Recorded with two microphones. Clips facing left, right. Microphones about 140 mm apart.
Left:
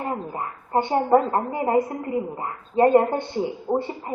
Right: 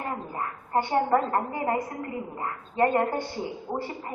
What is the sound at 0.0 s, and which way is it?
A woman's voice, 25° left (ahead or behind).